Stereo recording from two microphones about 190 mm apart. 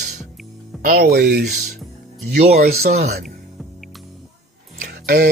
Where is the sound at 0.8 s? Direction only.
55° right (ahead or behind).